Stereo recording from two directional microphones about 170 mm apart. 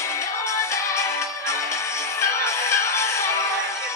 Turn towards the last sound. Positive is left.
turn(degrees=15)  # may be behind; listen again after turning